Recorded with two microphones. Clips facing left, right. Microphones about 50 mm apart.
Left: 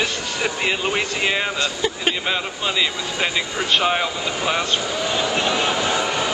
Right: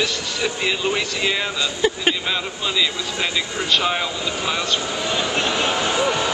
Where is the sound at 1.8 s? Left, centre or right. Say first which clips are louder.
Right 7 dB; centre.